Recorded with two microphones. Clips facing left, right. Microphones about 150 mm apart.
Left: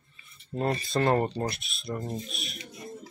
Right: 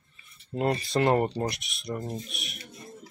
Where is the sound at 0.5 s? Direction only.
15° right (ahead or behind).